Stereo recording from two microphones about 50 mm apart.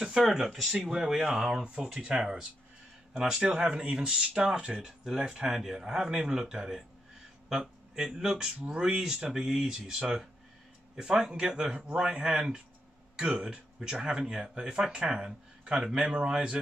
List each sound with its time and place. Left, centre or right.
0.3 s speech: centre
2.0 s speech: right
3.3 s speech: centre